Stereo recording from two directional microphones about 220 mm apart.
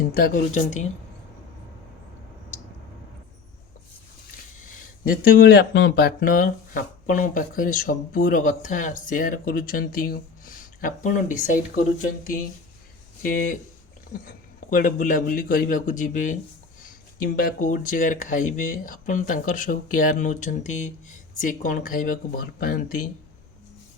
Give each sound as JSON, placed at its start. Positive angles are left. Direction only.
{"t": 0.0, "sound": "speech", "side_deg": 40}
{"t": 4.6, "sound": "speech", "side_deg": 40}